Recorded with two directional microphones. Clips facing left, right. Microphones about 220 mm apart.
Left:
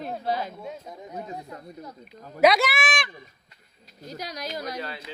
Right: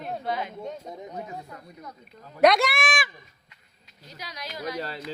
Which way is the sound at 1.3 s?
20° left (ahead or behind).